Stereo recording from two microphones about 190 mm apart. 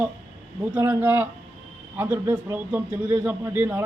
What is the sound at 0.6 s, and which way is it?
A man's voice, 10° right (ahead or behind).